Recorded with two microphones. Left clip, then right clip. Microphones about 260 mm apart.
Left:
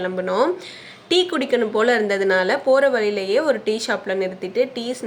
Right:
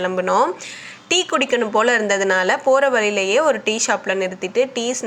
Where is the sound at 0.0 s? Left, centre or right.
Centre.